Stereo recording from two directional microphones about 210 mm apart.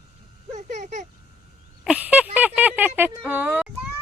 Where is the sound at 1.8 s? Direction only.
5° right (ahead or behind).